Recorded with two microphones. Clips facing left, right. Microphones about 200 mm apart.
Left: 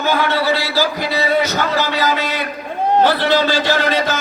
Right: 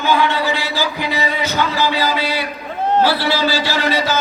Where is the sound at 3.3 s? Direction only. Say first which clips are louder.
Left 3 dB; 50° left (ahead or behind).